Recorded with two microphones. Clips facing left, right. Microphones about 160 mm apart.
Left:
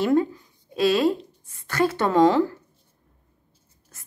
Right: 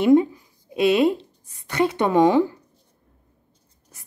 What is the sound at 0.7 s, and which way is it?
A woman's voice, 20° right (ahead or behind).